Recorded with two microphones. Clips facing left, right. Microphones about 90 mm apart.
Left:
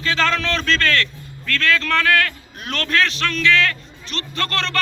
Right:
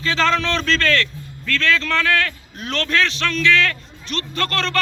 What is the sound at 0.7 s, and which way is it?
A man's voice, 35° left (ahead or behind).